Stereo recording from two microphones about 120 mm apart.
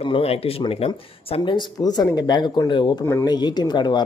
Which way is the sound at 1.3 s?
40° left (ahead or behind).